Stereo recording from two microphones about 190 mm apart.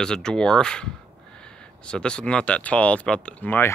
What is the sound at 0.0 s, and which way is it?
Speech, 5° left (ahead or behind).